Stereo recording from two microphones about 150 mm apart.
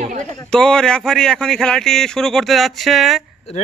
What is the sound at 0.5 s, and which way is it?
Speech, 5° left (ahead or behind).